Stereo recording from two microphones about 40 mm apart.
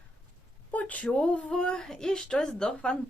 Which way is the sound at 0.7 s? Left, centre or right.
Left.